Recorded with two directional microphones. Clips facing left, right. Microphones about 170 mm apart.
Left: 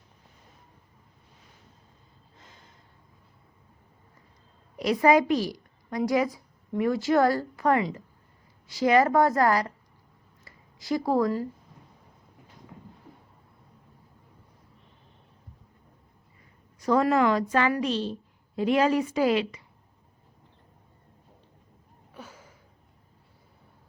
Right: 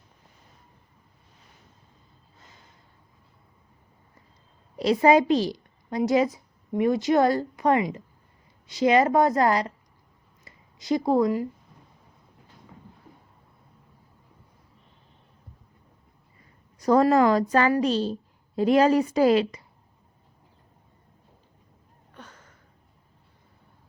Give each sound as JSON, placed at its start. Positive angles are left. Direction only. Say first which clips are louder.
{"t": 4.8, "sound": "a woman's voice", "louder": "right 2 dB", "side_deg": -30}
{"t": 16.8, "sound": "a woman's voice", "louder": "right 4 dB", "side_deg": -40}
{"t": 22.1, "sound": "a sound", "louder": "left 2 dB", "side_deg": 10}